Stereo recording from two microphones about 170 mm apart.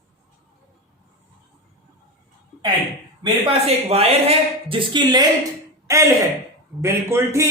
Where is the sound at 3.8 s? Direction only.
35° right (ahead or behind).